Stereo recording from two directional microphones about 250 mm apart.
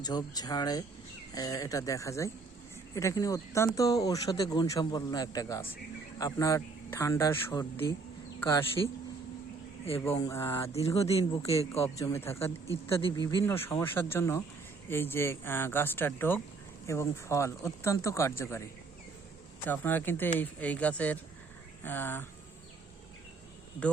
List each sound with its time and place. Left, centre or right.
0.0 s a man's voice: centre
10.1 s speech: centre
10.7 s speech: left
11.9 s speech: centre
12.7 s speech: left
13.1 s speech: centre
19.6 s speech: centre